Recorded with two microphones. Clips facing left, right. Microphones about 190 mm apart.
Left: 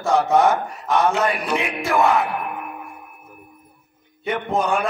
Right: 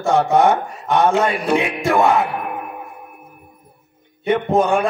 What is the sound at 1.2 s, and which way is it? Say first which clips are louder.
Speech: right 4 dB; 25° right (ahead or behind).